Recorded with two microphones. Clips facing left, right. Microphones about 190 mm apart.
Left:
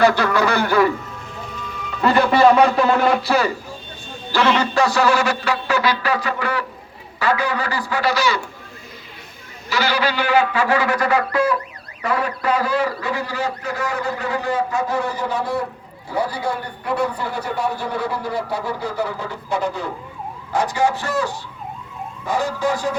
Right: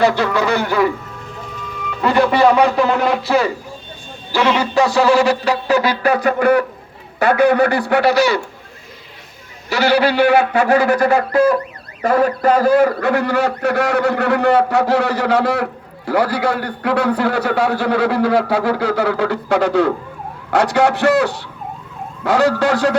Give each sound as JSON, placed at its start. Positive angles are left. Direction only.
{"t": 0.0, "sound": "speech", "side_deg": -25}
{"t": 2.0, "sound": "speech", "side_deg": -15}
{"t": 4.3, "sound": "speech", "side_deg": -10}
{"t": 4.9, "sound": "music", "side_deg": -30}
{"t": 6.0, "sound": "a man's voice", "side_deg": -50}
{"t": 9.6, "sound": "a man's voice", "side_deg": -65}
{"t": 10.9, "sound": "music", "side_deg": -35}
{"t": 12.0, "sound": "a man's voice", "side_deg": -45}